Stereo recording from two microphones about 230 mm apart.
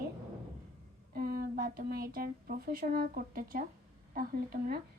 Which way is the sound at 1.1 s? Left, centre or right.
Right.